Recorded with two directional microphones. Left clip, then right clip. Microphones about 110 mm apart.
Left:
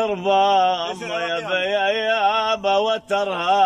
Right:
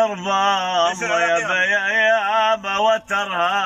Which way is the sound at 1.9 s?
40° left (ahead or behind).